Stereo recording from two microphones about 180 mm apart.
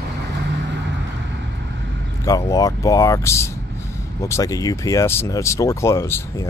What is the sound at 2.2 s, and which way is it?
Speech, 20° left (ahead or behind).